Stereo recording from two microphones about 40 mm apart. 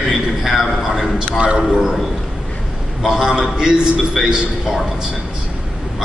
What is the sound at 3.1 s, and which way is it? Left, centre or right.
Speech, centre.